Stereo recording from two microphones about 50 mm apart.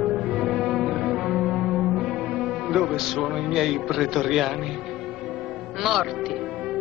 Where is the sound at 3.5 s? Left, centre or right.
Centre.